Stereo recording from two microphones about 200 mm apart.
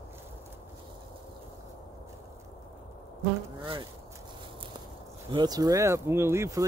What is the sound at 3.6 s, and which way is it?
Speech, 25° right (ahead or behind).